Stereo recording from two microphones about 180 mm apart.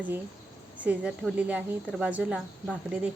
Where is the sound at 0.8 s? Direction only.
5° right (ahead or behind).